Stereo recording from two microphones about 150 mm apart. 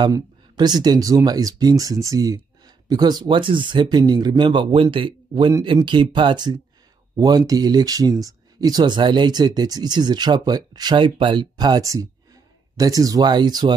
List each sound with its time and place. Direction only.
0.0 s speech: 30° right (ahead or behind)